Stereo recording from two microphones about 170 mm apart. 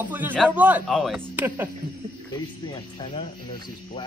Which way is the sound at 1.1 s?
10° right (ahead or behind).